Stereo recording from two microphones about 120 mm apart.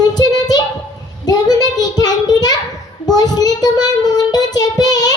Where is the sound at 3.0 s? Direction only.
35° left (ahead or behind).